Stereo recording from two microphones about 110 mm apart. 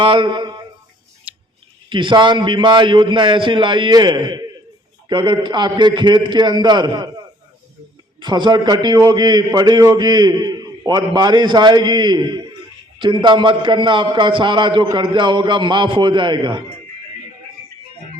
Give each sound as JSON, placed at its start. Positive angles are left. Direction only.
{"t": 0.0, "sound": "a man's voice", "side_deg": -50}
{"t": 1.3, "sound": "scissors", "side_deg": -10}
{"t": 1.9, "sound": "a man's voice", "side_deg": -45}
{"t": 8.2, "sound": "a man's voice", "side_deg": -45}